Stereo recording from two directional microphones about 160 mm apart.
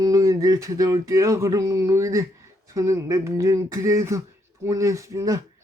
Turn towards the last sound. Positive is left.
turn(degrees=-20)  # may be behind; listen again after turning